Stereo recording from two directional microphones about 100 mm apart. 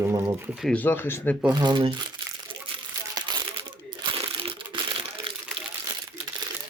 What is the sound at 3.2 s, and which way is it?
Crumpling, 50° right (ahead or behind).